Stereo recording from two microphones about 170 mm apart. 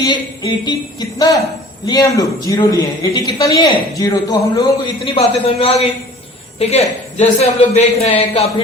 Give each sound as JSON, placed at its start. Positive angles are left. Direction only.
{"t": 0.0, "sound": "a man's voice", "side_deg": 25}